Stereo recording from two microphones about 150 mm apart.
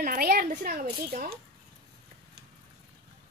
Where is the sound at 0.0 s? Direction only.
80° right.